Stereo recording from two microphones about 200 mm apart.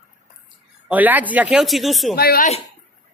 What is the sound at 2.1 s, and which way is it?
Speech, 50° left (ahead or behind).